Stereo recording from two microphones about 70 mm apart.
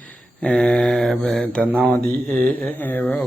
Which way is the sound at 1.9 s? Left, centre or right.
Left.